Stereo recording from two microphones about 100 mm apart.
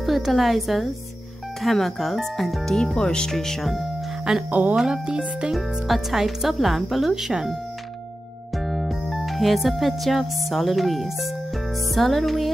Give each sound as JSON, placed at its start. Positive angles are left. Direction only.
{"t": 0.0, "sound": "speech", "side_deg": 0}
{"t": 4.5, "sound": "speech", "side_deg": -15}
{"t": 8.5, "sound": "music", "side_deg": 0}
{"t": 11.9, "sound": "speech", "side_deg": 0}